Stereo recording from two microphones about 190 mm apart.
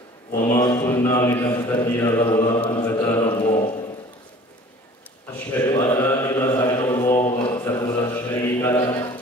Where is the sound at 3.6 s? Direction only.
35° left (ahead or behind).